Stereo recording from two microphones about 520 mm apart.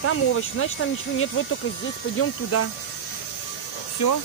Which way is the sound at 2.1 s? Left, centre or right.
Left.